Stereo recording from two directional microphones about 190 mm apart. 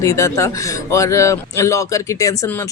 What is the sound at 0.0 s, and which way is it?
Speech, 15° left (ahead or behind).